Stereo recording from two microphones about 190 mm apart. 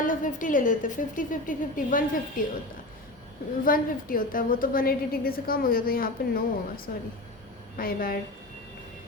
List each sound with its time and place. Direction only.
0.0 s a woman's voice: 45° left (ahead or behind)
3.6 s a woman's voice: 45° left (ahead or behind)